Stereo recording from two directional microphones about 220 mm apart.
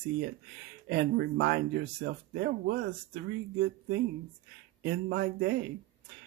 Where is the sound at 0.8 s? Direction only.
50° right (ahead or behind).